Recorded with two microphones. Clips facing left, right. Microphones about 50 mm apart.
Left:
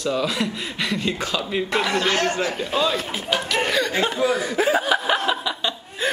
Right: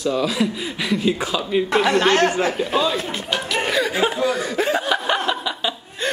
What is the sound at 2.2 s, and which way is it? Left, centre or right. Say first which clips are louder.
Speech: right 4 dB; right.